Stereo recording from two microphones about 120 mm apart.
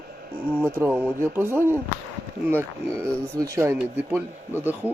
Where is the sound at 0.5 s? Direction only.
20° right (ahead or behind).